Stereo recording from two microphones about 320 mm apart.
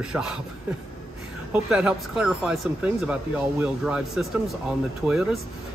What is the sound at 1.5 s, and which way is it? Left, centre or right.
Speech, centre.